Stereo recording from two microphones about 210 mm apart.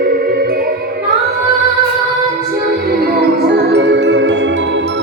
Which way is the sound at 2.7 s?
50° right (ahead or behind).